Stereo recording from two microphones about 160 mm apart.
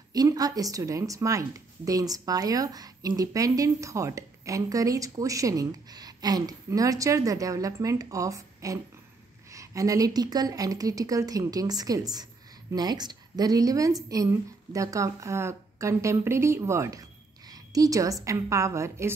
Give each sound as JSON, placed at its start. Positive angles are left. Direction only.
{"t": 0.1, "sound": "a woman's voice", "side_deg": -25}